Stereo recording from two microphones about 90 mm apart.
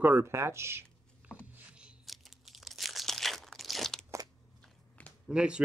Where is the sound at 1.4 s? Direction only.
15° right (ahead or behind).